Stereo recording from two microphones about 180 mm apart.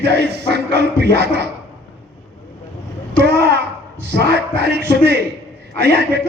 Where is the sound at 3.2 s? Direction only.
65° right (ahead or behind).